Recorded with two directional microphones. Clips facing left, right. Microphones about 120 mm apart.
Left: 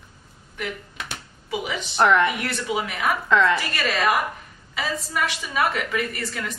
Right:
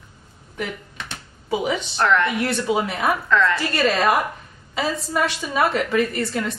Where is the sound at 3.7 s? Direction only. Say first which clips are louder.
Right 4 dB; 35° right (ahead or behind).